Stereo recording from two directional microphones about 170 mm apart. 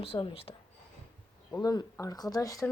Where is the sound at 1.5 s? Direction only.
20° left (ahead or behind).